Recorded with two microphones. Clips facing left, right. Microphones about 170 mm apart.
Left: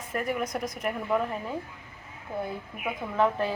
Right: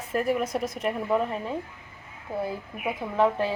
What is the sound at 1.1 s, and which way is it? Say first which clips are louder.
Speech: right 1 dB; 5° right (ahead or behind).